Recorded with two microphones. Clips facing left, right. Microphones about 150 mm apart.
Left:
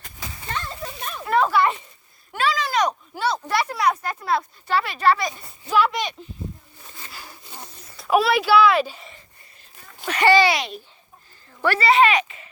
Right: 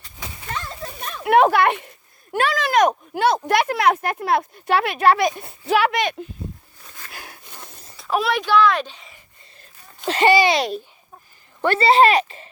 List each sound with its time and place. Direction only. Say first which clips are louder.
0.5 s a sound: even; centre (ahead or behind)
1.2 s speech: right 4 dB; 70° right (ahead or behind)
2.3 s speech: right 4 dB; 50° right (ahead or behind)
3.9 s a child's voice: right 3 dB; 65° right (ahead or behind)
7.1 s a sound: right 3 dB; 55° right (ahead or behind)
7.9 s a child's voice: left 3 dB; centre (ahead or behind)
10.1 s speech: right 1 dB; 20° right (ahead or behind)
11.6 s speech: right 3 dB; 25° right (ahead or behind)